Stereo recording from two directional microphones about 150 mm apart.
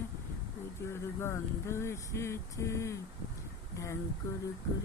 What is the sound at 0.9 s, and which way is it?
Vehicle, 15° left (ahead or behind).